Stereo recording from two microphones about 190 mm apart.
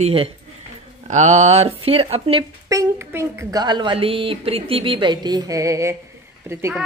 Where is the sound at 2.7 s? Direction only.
15° right (ahead or behind).